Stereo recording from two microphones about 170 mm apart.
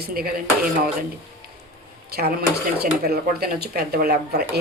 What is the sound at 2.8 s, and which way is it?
Dishes, 65° right (ahead or behind).